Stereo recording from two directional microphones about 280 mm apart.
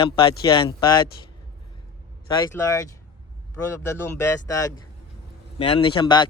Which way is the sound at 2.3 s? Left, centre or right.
Centre.